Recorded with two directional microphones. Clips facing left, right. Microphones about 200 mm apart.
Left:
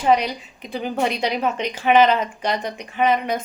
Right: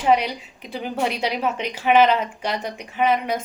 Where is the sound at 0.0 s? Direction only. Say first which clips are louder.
Left 1 dB; 10° right (ahead or behind).